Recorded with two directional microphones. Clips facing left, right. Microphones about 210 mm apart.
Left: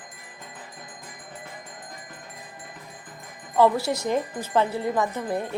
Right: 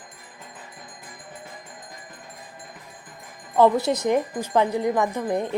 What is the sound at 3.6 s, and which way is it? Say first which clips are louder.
Speech: right 2 dB; 20° right (ahead or behind).